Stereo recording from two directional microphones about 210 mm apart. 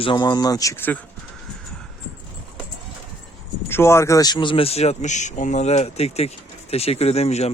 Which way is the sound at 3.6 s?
10° left (ahead or behind).